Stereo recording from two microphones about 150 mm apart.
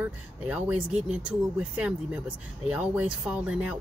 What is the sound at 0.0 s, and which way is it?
Speech, 10° right (ahead or behind).